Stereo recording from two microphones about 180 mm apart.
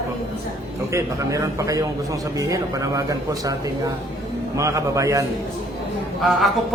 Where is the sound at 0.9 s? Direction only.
20° right (ahead or behind).